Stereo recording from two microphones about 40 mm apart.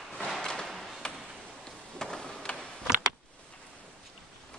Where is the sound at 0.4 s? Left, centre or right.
Centre.